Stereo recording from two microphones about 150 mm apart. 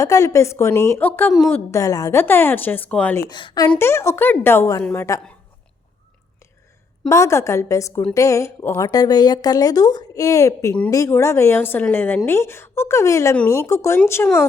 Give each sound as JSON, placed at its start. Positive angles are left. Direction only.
{"t": 0.0, "sound": "a woman's voice", "side_deg": 20}
{"t": 3.2, "sound": "a woman's voice", "side_deg": 30}
{"t": 3.7, "sound": "a woman's voice", "side_deg": 15}
{"t": 7.1, "sound": "a woman's voice", "side_deg": 20}